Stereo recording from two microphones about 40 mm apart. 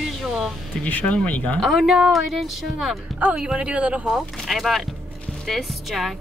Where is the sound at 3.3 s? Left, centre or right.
Right.